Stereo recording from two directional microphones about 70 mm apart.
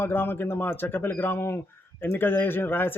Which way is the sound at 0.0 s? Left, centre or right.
Left.